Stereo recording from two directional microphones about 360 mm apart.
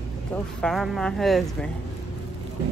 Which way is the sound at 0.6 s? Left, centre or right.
Centre.